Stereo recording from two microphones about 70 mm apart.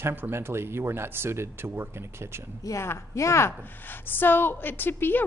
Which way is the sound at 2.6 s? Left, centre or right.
Left.